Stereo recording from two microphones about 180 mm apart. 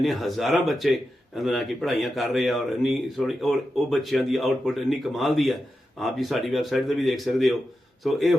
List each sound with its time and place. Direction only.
0.0 s speech: centre (ahead or behind)